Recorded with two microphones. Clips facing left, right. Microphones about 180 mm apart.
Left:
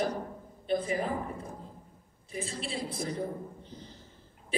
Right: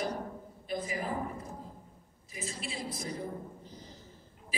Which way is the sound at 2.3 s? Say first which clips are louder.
Left 4 dB; 30° left (ahead or behind).